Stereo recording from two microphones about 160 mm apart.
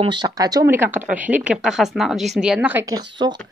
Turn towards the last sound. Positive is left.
turn(degrees=-25)  # may be behind; listen again after turning